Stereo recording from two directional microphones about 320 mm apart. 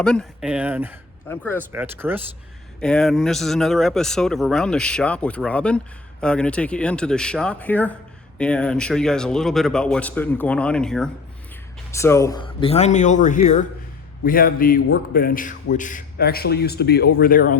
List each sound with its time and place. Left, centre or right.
0.0 s speech: centre
1.3 s speech: centre
1.7 s speech: centre; by 17.6 s left